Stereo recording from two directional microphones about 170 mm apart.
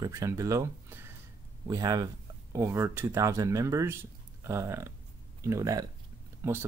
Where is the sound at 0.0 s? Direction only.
20° right (ahead or behind).